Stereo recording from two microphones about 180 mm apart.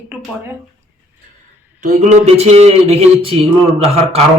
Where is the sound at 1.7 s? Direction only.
45° right (ahead or behind).